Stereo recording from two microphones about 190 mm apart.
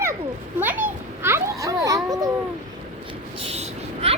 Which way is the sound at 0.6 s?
10° right (ahead or behind).